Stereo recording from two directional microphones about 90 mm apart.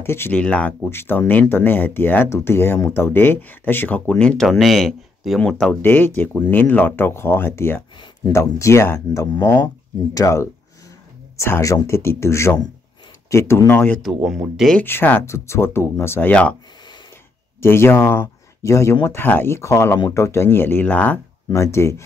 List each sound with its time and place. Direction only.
0.0 s speech: 25° left (ahead or behind)
0.4 s speech: 15° left (ahead or behind)
0.8 s speech: 25° left (ahead or behind); by 5.4 s centre (ahead or behind)
5.4 s speech: 10° left (ahead or behind); by 13.6 s 30° left (ahead or behind)
13.7 s speech: 20° left (ahead or behind)
14.0 s speech: 5° right (ahead or behind)
14.8 s speech: 20° left (ahead or behind)
16.3 s speech: 15° left (ahead or behind)
17.6 s speech: 25° left (ahead or behind)
21.5 s speech: 30° left (ahead or behind)